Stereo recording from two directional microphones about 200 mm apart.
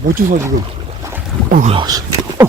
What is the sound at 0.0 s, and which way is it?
Speech, 45° right (ahead or behind).